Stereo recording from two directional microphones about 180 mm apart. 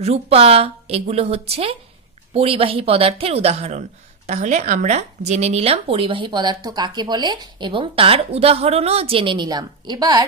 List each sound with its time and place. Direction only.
0.0 s speech: 35° right (ahead or behind)